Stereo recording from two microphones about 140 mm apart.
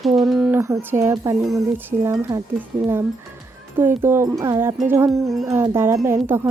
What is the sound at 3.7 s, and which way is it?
Speech, 15° right (ahead or behind).